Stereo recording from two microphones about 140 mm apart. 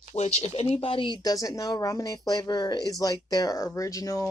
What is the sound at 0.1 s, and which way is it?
Speech, 50° left (ahead or behind).